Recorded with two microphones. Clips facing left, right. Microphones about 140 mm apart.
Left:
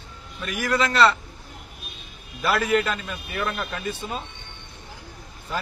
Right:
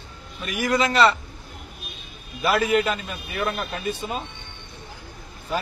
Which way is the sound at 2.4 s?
15° right (ahead or behind).